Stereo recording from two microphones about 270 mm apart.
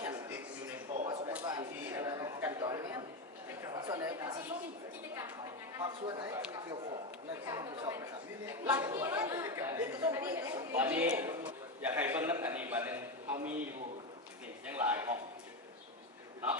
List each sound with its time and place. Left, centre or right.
0.0 s a sound: centre
5.7 s speech: centre
14.7 s a man's voice: centre